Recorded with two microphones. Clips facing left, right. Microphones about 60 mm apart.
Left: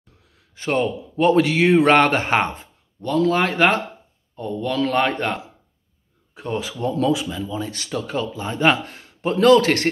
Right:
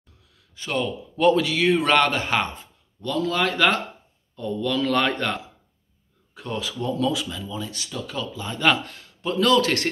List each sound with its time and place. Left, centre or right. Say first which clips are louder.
0.6 s speech: left 5 dB; left
7.5 s speech: left 5 dB; left